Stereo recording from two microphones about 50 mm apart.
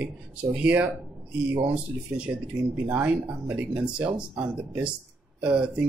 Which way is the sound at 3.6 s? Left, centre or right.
Centre.